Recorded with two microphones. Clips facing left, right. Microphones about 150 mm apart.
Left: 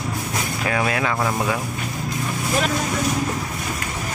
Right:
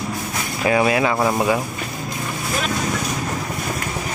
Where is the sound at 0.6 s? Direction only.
15° right (ahead or behind).